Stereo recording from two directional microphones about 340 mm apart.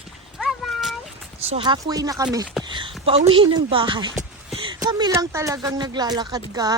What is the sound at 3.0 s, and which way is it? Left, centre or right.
Speech, centre.